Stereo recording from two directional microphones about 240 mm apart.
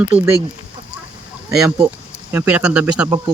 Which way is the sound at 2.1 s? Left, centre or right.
Centre.